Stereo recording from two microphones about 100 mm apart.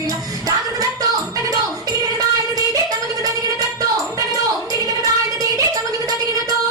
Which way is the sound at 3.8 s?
35° right (ahead or behind).